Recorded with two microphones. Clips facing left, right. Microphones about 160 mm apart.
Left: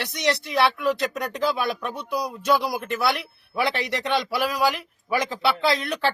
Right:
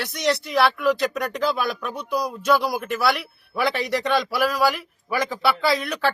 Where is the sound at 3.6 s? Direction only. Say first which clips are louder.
Right 3 dB; 20° left (ahead or behind).